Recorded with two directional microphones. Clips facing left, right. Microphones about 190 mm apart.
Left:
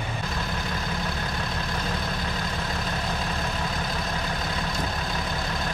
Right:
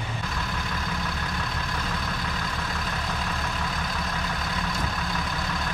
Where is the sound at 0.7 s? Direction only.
30° left (ahead or behind).